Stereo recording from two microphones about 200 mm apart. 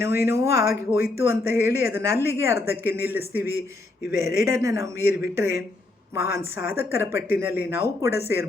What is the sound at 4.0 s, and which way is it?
Speech, 55° left (ahead or behind).